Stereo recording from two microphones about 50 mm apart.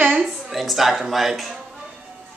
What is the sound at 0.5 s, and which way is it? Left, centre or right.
Speech, centre.